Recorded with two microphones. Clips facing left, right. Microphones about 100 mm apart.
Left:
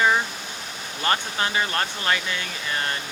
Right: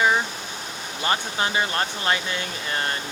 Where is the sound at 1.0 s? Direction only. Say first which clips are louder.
Even; 25° right (ahead or behind).